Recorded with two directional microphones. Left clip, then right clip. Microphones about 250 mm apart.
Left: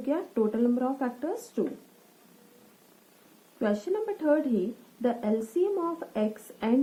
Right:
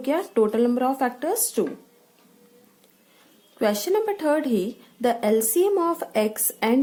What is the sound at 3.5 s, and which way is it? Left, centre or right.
A woman's voice, right.